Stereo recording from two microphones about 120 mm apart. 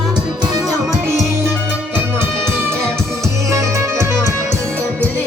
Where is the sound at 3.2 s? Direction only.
25° right (ahead or behind).